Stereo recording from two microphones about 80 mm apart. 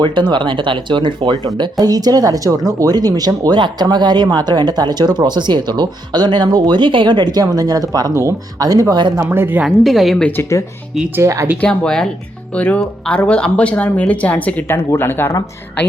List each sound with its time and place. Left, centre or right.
0.0 s speech: right
1.8 s speech: right
7.4 s speech: right
8.1 s speech: right
9.3 s a woman's voice: right
9.6 s a woman's voice: centre
11.5 s speech: centre
14.7 s speech: left